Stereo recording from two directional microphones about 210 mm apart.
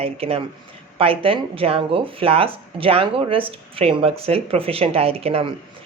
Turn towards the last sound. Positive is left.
turn(degrees=-30)  # may be behind; listen again after turning